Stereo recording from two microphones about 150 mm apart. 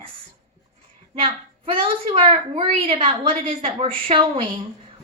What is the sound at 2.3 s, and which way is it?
A woman's voice, 40° right (ahead or behind).